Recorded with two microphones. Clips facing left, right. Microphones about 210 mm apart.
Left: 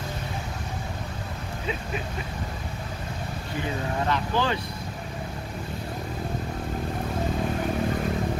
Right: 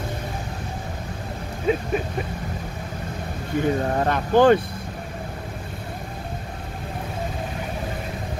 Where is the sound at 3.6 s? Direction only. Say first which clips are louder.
Right 8 dB; 50° right (ahead or behind).